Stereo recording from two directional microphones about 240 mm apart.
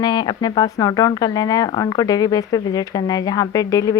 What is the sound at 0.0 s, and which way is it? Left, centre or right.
Speech, centre.